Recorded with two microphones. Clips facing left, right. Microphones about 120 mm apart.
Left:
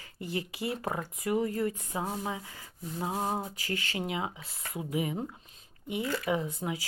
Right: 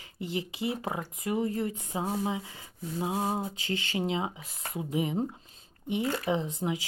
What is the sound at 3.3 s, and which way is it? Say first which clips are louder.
Speech: right 2 dB; 25° right (ahead or behind).